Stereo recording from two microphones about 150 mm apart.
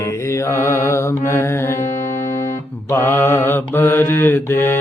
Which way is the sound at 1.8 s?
50° left (ahead or behind).